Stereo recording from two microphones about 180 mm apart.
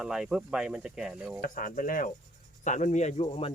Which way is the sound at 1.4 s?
50° left (ahead or behind).